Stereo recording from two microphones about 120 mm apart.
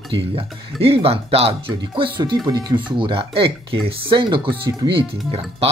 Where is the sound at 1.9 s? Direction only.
40° right (ahead or behind).